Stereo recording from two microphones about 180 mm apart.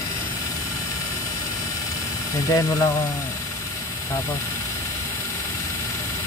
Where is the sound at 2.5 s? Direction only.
15° left (ahead or behind).